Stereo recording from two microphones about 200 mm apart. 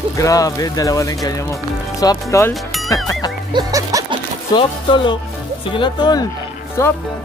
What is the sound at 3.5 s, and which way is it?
Music, 20° right (ahead or behind).